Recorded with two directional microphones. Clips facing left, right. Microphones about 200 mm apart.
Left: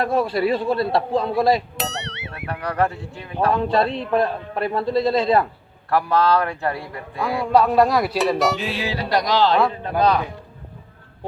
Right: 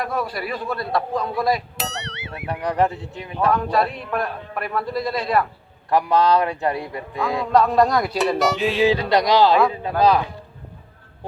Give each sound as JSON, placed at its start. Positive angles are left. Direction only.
{"t": 0.0, "sound": "a man's voice", "side_deg": 25}
{"t": 1.8, "sound": "music", "side_deg": 0}
{"t": 2.5, "sound": "a man's voice", "side_deg": -15}
{"t": 3.5, "sound": "a man's voice", "side_deg": 25}
{"t": 5.9, "sound": "a man's voice", "side_deg": -15}
{"t": 7.5, "sound": "speech", "side_deg": 5}
{"t": 8.8, "sound": "a man's voice", "side_deg": -20}